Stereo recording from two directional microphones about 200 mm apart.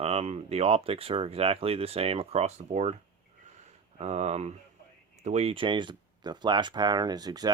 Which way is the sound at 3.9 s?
30° right (ahead or behind).